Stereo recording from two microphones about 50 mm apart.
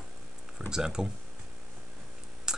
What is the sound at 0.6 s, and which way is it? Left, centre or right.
Speech, centre.